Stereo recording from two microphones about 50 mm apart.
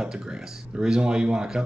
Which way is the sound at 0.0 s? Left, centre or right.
Centre.